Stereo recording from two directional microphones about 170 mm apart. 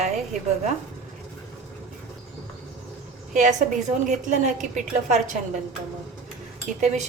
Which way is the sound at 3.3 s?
45° right (ahead or behind).